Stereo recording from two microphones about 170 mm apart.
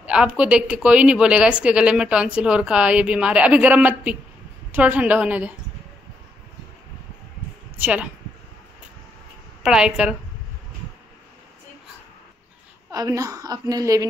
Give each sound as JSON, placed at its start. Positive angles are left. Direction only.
{"t": 0.0, "sound": "speech", "side_deg": -5}
{"t": 7.8, "sound": "speech", "side_deg": -10}
{"t": 9.6, "sound": "a woman's voice", "side_deg": -5}
{"t": 12.9, "sound": "a woman's voice", "side_deg": -20}